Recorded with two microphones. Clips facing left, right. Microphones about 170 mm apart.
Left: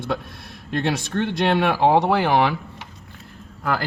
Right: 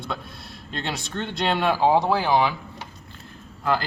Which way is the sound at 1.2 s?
65° left (ahead or behind).